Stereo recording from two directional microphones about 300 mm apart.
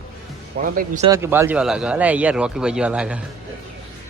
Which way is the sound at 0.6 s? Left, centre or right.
Right.